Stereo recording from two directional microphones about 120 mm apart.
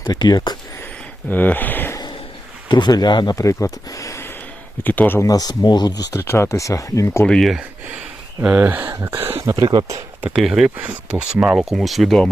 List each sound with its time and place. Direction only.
0.0 s speech: 35° left (ahead or behind)
1.3 s speech: 15° left (ahead or behind)
2.6 s speech: 35° left (ahead or behind)
4.8 s speech: 15° left (ahead or behind)
5.2 s speech: 30° left (ahead or behind)
7.3 s speech: centre (ahead or behind)
8.4 s speech: 10° right (ahead or behind)
9.1 s speech: 50° right (ahead or behind)
9.4 s speech: 25° right (ahead or behind)
9.6 s speech: 40° right (ahead or behind)
10.3 s speech: centre (ahead or behind)